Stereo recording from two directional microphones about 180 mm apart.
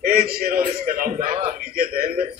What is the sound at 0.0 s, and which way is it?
A man's voice, 55° right (ahead or behind).